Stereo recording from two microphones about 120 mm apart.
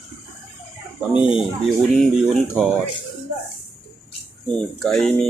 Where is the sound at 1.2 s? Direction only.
45° left (ahead or behind).